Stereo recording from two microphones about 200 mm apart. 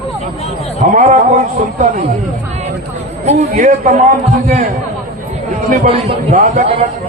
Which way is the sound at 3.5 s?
40° right (ahead or behind).